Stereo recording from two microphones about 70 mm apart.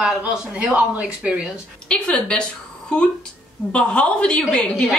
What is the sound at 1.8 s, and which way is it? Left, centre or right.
A woman's voice, centre.